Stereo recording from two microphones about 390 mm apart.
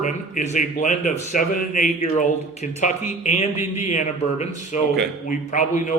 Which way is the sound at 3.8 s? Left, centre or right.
Centre.